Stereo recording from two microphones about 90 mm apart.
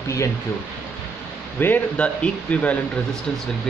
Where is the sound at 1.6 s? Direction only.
15° left (ahead or behind).